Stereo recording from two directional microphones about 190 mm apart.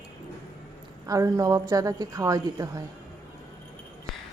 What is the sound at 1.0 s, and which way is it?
A woman's voice, 20° right (ahead or behind).